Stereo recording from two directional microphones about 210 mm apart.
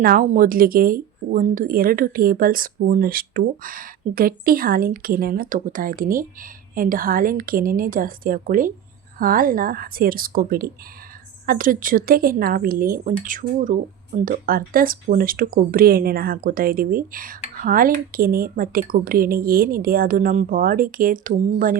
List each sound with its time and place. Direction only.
0.0 s speech: 40° right (ahead or behind)